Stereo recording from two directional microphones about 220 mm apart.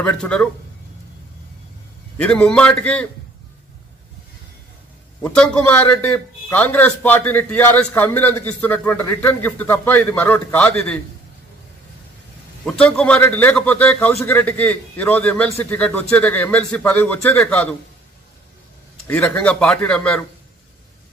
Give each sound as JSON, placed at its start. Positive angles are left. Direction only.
{"t": 0.0, "sound": "a man's voice", "side_deg": 5}
{"t": 2.1, "sound": "a man's voice", "side_deg": 5}
{"t": 5.2, "sound": "a man's voice", "side_deg": 5}
{"t": 12.6, "sound": "a man's voice", "side_deg": 5}
{"t": 19.0, "sound": "a man's voice", "side_deg": 5}